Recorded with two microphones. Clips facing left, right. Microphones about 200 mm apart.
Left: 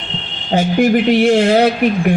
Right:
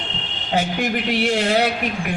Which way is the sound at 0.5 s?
40° left (ahead or behind).